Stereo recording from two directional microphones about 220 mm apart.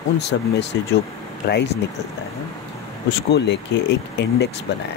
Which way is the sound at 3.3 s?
50° left (ahead or behind).